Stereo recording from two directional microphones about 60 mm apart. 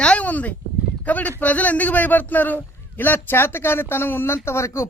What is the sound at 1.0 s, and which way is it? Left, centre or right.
Speech, left.